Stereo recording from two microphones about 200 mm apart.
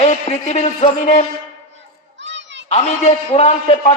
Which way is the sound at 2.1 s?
65° right (ahead or behind).